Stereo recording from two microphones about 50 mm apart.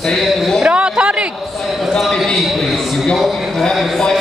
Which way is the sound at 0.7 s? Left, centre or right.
Centre.